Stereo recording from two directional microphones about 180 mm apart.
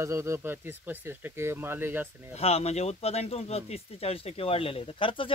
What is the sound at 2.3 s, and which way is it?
Speech, 35° left (ahead or behind).